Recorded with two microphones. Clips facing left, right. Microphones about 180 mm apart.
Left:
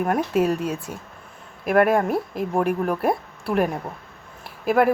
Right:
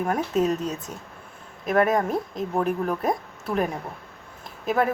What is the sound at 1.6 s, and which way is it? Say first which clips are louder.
Speech: left 3 dB; 65° left (ahead or behind).